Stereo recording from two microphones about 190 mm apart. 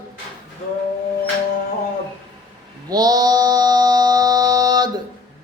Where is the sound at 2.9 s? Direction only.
20° right (ahead or behind).